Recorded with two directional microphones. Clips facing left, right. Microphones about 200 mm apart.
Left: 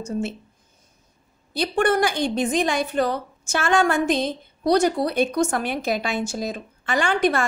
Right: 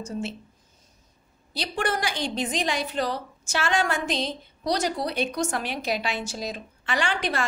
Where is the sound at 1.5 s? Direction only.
55° left (ahead or behind).